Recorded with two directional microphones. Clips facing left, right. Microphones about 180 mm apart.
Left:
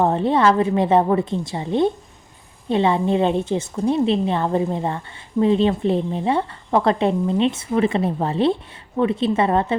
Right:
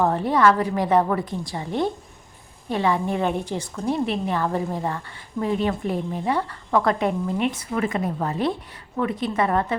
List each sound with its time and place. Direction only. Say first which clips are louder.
0.0 s a woman's voice: left 2 dB; 20° left (ahead or behind)